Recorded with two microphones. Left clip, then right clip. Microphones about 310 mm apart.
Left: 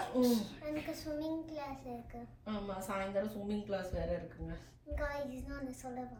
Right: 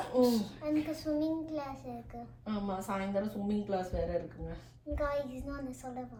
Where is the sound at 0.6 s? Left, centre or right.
Centre.